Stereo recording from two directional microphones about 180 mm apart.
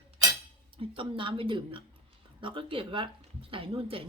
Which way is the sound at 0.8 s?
30° right (ahead or behind).